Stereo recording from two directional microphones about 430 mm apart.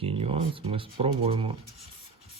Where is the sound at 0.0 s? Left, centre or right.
Centre.